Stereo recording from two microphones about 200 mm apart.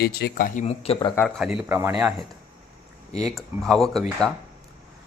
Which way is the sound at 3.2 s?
Centre (ahead or behind).